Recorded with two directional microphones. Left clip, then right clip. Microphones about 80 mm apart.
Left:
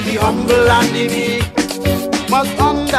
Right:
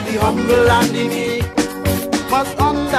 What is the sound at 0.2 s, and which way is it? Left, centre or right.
Music, right.